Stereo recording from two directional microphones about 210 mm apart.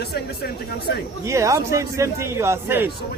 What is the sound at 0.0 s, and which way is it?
Speech, 50° left (ahead or behind).